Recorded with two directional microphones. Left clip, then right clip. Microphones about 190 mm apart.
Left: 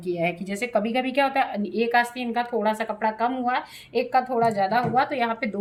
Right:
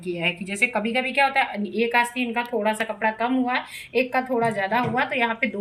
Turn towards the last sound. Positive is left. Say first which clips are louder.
# even
turn(degrees=35)  # may be behind; listen again after turning